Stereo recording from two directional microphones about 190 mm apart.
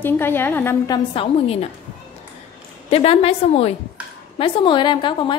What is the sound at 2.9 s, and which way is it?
A woman's voice, 30° left (ahead or behind).